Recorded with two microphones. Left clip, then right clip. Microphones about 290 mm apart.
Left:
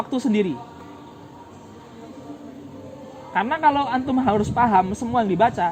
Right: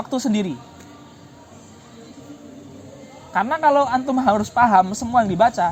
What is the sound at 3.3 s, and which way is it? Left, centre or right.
A woman's voice, right.